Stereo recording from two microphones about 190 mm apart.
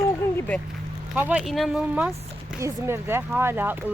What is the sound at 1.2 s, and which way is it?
Speech, 5° right (ahead or behind).